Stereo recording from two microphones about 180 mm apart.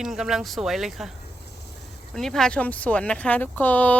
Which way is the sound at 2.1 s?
5° left (ahead or behind).